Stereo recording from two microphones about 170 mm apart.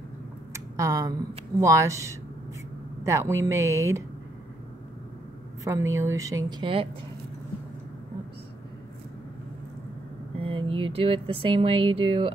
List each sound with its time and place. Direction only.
0.5 s a sound: 20° right (ahead or behind)
1.6 s speech: 20° right (ahead or behind)
5.6 s speech: 20° right (ahead or behind)
10.4 s speech: 30° right (ahead or behind)